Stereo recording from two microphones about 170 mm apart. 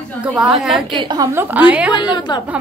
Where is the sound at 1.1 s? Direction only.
20° right (ahead or behind).